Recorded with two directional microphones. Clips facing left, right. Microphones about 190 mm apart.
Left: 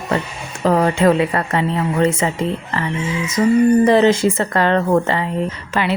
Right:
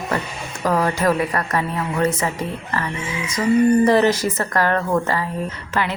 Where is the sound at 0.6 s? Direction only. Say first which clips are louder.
Left 5 dB; 25° left (ahead or behind).